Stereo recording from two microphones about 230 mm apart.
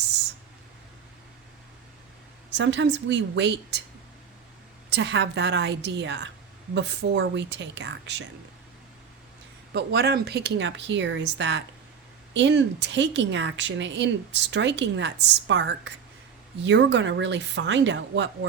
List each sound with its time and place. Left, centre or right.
2.5 s a woman's voice: right
4.9 s a woman's voice: right
9.7 s a woman's voice: right